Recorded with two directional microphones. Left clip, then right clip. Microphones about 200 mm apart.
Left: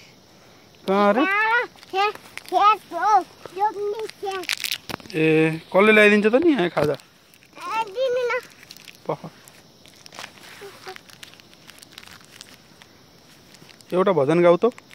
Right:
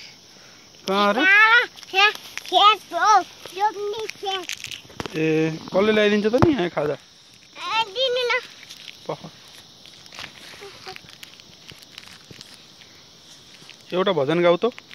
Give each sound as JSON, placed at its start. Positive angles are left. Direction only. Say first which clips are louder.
{"t": 0.8, "sound": "clip-clop", "louder": "right 1 dB", "side_deg": 10}
{"t": 2.5, "sound": "speech", "louder": "right 2 dB", "side_deg": -15}
{"t": 3.0, "sound": "speech", "louder": "right 2 dB", "side_deg": 5}
{"t": 4.5, "sound": "a sound", "louder": "left 6 dB", "side_deg": 55}
{"t": 5.1, "sound": "speech", "louder": "left 3 dB", "side_deg": 5}
{"t": 7.5, "sound": "a sound", "louder": "right 2 dB", "side_deg": 5}
{"t": 9.0, "sound": "speech", "louder": "left 3 dB", "side_deg": 20}
{"t": 10.2, "sound": "walk", "louder": "right 1 dB", "side_deg": 25}
{"t": 10.8, "sound": "a sound", "louder": "right 1 dB", "side_deg": 35}
{"t": 11.9, "sound": "crumpling", "louder": "right 1 dB", "side_deg": 35}
{"t": 13.8, "sound": "speech", "louder": "left 2 dB", "side_deg": 15}